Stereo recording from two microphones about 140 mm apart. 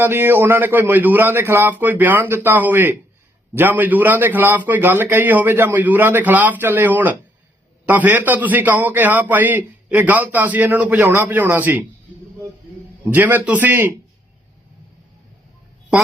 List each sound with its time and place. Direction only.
0.0 s a man's voice: 15° right (ahead or behind)
13.1 s a man's voice: 15° right (ahead or behind)